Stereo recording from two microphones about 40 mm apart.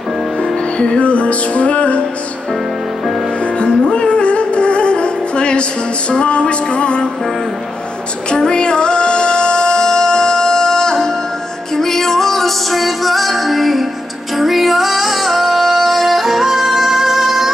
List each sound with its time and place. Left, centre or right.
0.7 s music: left
3.5 s music: left
8.3 s music: left; by 17.5 s centre